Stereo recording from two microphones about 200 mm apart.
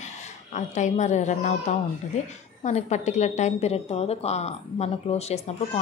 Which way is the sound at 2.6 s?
35° left (ahead or behind).